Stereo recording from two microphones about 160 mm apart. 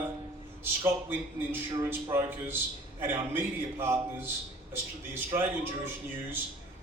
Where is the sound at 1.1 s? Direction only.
15° right (ahead or behind).